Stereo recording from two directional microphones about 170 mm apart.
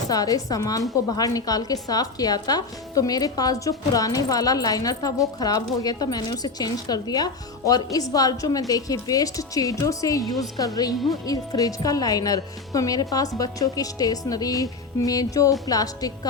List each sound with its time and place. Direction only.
0.1 s a woman's voice: 20° left (ahead or behind)